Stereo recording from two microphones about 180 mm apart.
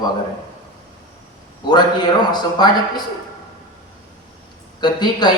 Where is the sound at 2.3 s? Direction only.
25° left (ahead or behind).